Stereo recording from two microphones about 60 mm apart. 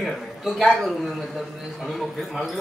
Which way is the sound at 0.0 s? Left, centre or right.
Centre.